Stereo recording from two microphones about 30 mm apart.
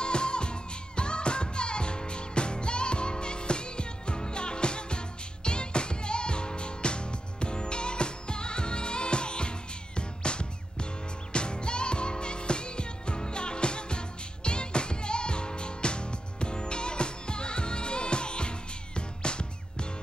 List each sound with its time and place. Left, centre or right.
0.0 s music: left